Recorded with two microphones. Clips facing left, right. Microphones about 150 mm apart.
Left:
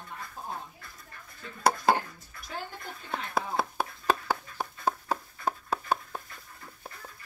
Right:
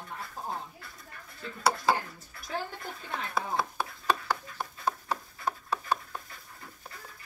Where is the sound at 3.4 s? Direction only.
55° left (ahead or behind).